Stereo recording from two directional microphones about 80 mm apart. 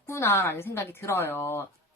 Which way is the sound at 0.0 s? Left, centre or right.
Left.